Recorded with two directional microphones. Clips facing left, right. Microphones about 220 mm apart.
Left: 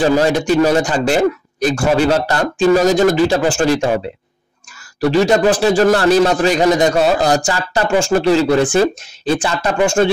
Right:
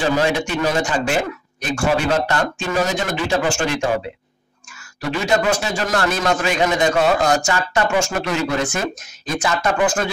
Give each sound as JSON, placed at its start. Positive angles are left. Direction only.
{"t": 0.0, "sound": "a man's voice", "side_deg": 40}
{"t": 5.0, "sound": "a man's voice", "side_deg": 35}